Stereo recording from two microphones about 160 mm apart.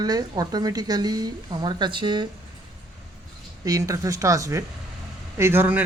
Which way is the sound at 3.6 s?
20° right (ahead or behind).